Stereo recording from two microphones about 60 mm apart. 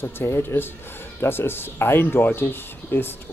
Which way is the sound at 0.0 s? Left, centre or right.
Left.